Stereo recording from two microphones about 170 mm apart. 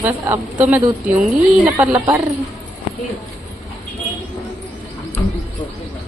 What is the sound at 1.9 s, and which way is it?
Speech, 20° right (ahead or behind).